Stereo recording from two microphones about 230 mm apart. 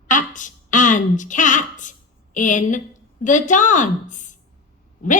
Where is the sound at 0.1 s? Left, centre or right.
Left.